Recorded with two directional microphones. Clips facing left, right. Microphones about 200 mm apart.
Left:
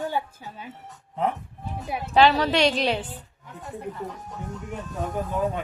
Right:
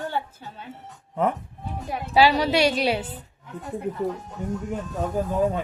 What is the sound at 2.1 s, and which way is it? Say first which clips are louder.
Speech: even; 10° right (ahead or behind).